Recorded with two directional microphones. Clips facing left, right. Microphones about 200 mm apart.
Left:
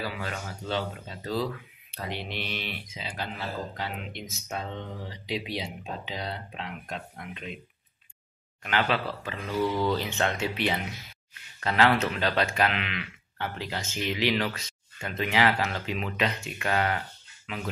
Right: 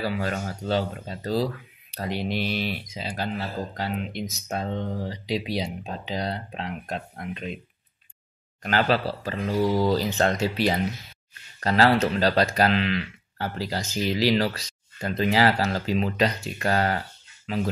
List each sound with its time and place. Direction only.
0.0 s speech: 40° right (ahead or behind)
8.6 s speech: 35° right (ahead or behind)